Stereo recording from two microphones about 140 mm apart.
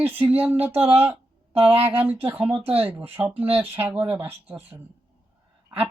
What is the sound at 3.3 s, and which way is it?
Speech, 40° right (ahead or behind).